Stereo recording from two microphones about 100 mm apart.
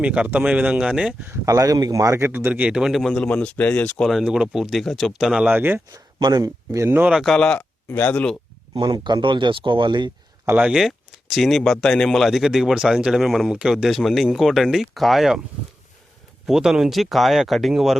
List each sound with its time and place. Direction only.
0.0 s speech: 10° right (ahead or behind)
1.2 s speech: 30° right (ahead or behind); by 3.2 s 5° left (ahead or behind)
3.2 s speech: 15° left (ahead or behind)
4.0 s speech: 5° right (ahead or behind); by 5.8 s 20° right (ahead or behind)
6.1 s speech: 40° right (ahead or behind); by 7.1 s 20° right (ahead or behind)
7.1 s speech: centre (ahead or behind)
7.3 s speech: 10° left (ahead or behind)
8.7 s speech: 50° right (ahead or behind)
10.6 s speech: 5° right (ahead or behind)
16.5 s speech: 5° right (ahead or behind)